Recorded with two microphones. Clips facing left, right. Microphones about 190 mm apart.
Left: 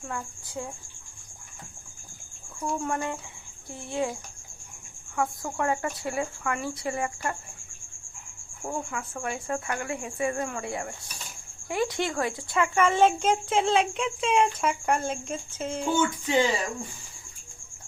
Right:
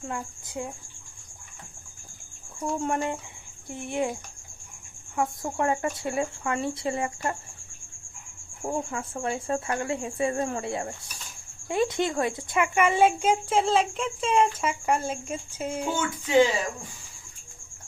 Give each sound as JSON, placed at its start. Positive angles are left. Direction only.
{"t": 0.0, "sound": "speech", "side_deg": -20}
{"t": 2.6, "sound": "speech", "side_deg": -25}
{"t": 8.6, "sound": "a child's voice", "side_deg": -25}